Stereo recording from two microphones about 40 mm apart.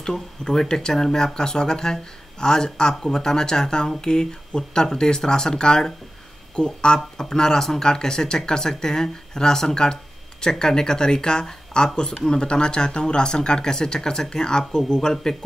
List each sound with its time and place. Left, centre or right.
0.0 s speech: centre